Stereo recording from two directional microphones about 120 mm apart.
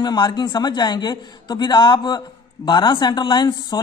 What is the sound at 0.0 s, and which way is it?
A man's voice, 35° left (ahead or behind).